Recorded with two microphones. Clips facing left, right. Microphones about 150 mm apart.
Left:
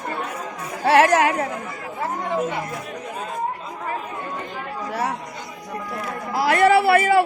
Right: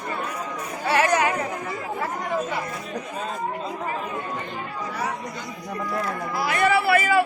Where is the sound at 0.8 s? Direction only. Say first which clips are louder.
Left 5 dB; 75° left (ahead or behind).